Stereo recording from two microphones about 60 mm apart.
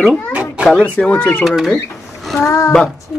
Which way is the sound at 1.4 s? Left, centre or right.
Centre.